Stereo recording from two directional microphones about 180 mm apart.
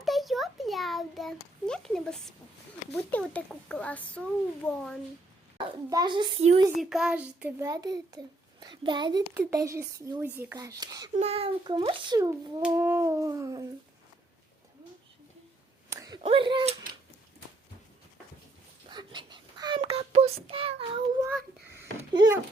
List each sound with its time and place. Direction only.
0.0 s a child's voice: centre (ahead or behind)
5.5 s a woman's voice: 25° right (ahead or behind)
6.7 s speech: centre (ahead or behind)
7.6 s a woman's voice: 20° right (ahead or behind)
11.2 s a woman's voice: 35° right (ahead or behind)
12.6 s a sound: 15° right (ahead or behind)
15.9 s a sound: 20° right (ahead or behind)
16.2 s speech: 25° right (ahead or behind)
18.9 s child singing: 25° right (ahead or behind)
22.1 s a woman's voice: 25° right (ahead or behind)